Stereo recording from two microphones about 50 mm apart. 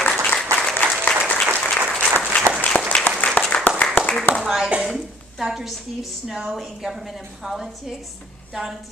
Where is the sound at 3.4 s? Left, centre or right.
Left.